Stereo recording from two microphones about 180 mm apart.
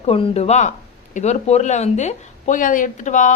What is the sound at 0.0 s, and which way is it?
Speech, 35° left (ahead or behind).